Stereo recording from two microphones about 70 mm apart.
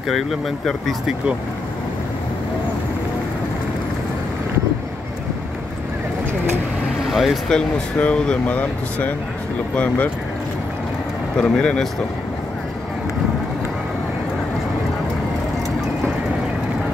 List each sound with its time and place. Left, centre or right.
0.1 s speech: centre
7.1 s a sound: centre
7.4 s speech: centre
11.3 s speech: centre